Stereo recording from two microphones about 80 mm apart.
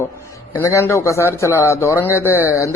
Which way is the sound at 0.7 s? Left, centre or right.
Left.